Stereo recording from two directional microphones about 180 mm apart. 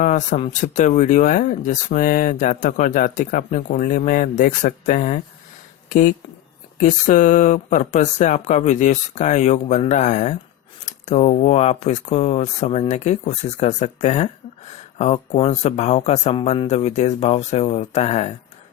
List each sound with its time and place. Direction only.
0.0 s speech: 45° left (ahead or behind)